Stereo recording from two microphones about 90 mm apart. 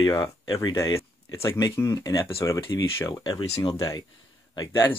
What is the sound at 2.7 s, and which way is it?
Speech, 45° left (ahead or behind).